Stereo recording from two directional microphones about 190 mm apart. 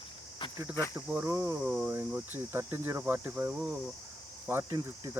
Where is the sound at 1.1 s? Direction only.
10° right (ahead or behind).